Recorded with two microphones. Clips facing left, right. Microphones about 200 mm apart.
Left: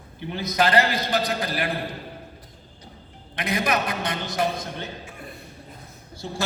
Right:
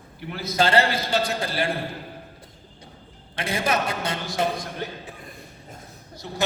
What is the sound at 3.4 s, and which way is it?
Speech, 30° right (ahead or behind).